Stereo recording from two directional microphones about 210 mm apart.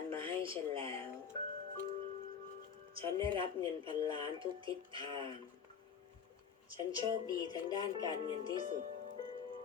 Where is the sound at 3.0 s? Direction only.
25° right (ahead or behind).